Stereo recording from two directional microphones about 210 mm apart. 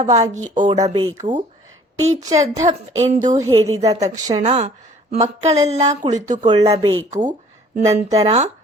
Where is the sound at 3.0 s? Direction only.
35° right (ahead or behind).